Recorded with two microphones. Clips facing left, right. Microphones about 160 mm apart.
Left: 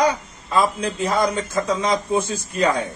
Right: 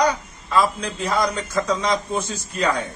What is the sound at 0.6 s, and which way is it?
Speech, 30° left (ahead or behind).